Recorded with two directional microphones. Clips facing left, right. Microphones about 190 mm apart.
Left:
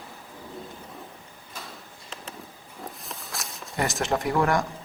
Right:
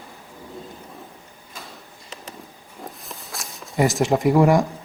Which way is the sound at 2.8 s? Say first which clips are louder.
Right 2 dB; centre (ahead or behind).